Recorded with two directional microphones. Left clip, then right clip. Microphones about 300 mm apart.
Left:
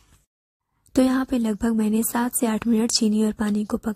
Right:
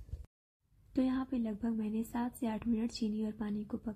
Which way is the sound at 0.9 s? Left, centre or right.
Left.